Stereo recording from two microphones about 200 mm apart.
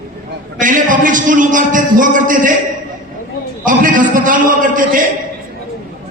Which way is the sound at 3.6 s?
40° right (ahead or behind).